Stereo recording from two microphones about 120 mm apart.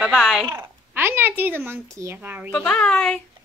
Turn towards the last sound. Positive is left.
turn(degrees=5)  # may be behind; listen again after turning